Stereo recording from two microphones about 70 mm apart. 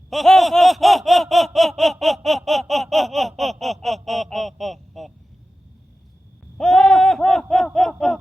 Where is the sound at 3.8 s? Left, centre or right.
Centre.